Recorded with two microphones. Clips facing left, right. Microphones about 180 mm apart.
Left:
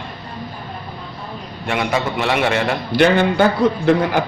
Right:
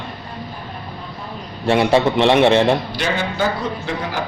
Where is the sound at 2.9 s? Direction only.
60° left (ahead or behind).